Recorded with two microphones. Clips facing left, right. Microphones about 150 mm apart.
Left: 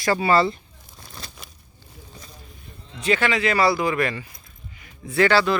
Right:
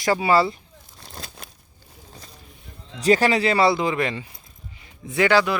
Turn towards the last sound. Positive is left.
turn(degrees=-15)  # may be behind; listen again after turning